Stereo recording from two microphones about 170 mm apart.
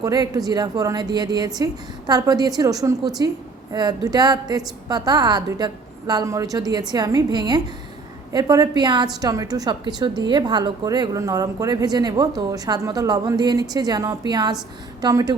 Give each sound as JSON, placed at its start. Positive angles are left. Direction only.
{"t": 0.0, "sound": "a woman's voice", "side_deg": -20}